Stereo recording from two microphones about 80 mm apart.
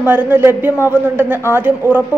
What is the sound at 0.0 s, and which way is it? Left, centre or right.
A woman's voice, right.